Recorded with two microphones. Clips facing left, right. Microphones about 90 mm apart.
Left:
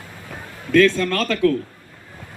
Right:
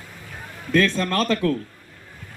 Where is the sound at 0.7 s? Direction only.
20° right (ahead or behind).